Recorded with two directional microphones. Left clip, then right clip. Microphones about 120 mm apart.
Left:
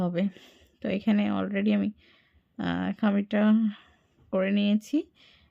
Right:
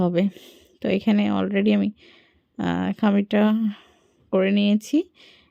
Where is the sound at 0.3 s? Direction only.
30° right (ahead or behind).